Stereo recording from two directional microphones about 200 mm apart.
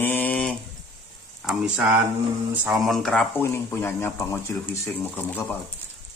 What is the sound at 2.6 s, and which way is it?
Speech, centre (ahead or behind).